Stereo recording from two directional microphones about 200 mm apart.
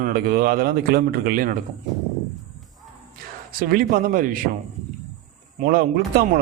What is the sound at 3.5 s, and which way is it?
Speech, 45° right (ahead or behind).